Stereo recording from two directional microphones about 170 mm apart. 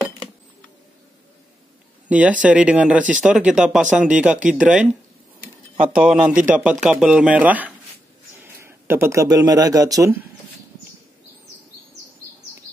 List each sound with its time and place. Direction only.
2.0 s speech: 10° right (ahead or behind)
5.9 s speech: 5° right (ahead or behind)
6.3 s speech: 50° right (ahead or behind)
6.8 s speech: 5° right (ahead or behind); by 10.1 s 20° right (ahead or behind)